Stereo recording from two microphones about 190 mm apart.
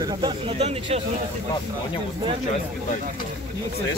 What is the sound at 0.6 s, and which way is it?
Speech, 35° right (ahead or behind).